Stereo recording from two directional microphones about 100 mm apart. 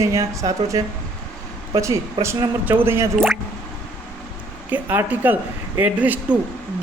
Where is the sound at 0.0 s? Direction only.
30° right (ahead or behind).